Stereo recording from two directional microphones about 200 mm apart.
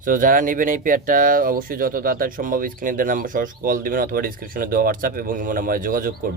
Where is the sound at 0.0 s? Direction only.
40° right (ahead or behind).